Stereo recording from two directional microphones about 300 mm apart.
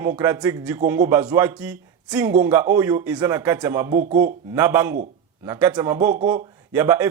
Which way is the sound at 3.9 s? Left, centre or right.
Right.